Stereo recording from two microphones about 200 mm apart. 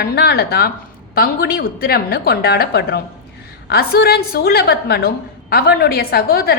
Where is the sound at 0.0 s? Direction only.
50° left (ahead or behind).